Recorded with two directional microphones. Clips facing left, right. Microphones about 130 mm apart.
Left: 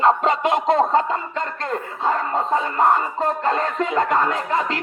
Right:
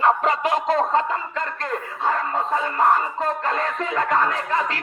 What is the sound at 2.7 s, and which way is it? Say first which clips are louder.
A man's voice: even; 25° left (ahead or behind).